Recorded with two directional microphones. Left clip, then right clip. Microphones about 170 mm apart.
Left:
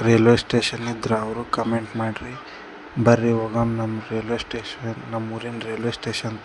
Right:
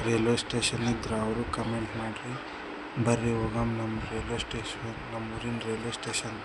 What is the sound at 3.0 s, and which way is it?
Speech, 35° left (ahead or behind).